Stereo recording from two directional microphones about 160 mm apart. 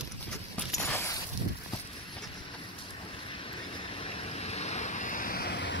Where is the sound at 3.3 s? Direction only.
35° left (ahead or behind); by 5.7 s 90° left.